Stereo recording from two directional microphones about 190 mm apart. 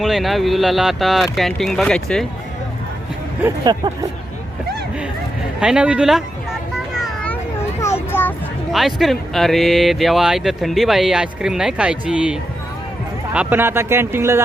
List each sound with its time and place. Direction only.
0.0 s speech: centre (ahead or behind)
3.4 s speech: 20° right (ahead or behind)
5.5 s speech: 5° right (ahead or behind)
6.7 s children playing: centre (ahead or behind)
8.7 s speech: centre (ahead or behind)